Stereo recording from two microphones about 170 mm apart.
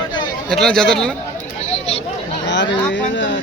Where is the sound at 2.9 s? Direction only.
90° left.